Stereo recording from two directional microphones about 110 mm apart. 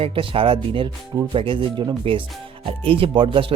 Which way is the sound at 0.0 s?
55° right (ahead or behind).